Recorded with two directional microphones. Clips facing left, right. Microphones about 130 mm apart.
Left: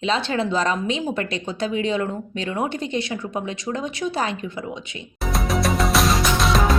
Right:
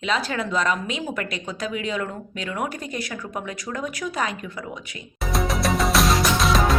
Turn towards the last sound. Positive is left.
turn(degrees=0)  # may be behind; listen again after turning